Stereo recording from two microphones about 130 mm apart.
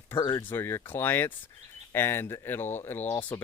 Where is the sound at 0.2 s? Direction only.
35° left (ahead or behind).